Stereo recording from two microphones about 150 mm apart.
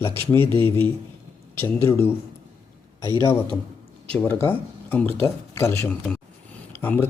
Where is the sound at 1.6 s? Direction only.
15° left (ahead or behind).